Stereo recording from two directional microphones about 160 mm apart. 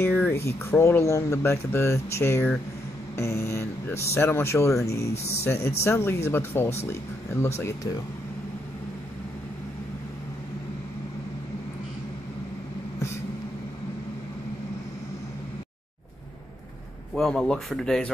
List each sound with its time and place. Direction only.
0.0 s speech: 10° left (ahead or behind)
5.1 s speech: 40° left (ahead or behind)
5.4 s speech: 15° left (ahead or behind)
17.1 s speech: 5° left (ahead or behind)